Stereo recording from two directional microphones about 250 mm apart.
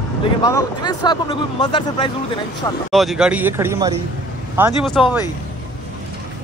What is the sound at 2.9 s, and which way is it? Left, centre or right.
Speech, centre.